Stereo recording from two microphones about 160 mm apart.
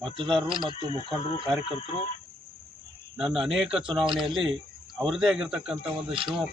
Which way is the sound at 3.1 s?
5° right (ahead or behind).